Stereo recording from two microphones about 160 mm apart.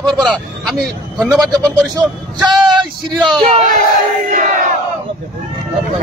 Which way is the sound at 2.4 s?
25° right (ahead or behind).